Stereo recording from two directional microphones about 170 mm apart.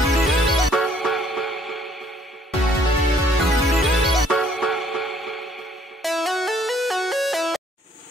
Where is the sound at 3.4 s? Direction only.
Centre (ahead or behind).